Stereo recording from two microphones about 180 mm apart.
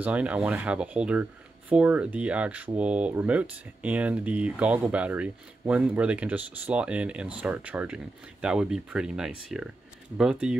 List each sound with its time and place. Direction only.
0.0 s speech: 5° right (ahead or behind)